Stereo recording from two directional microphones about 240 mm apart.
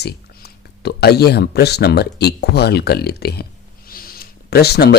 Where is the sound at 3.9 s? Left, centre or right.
Left.